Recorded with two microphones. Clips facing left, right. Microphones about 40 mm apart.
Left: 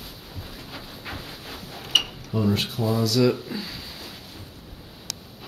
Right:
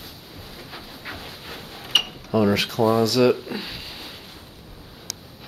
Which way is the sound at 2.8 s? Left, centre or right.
Right.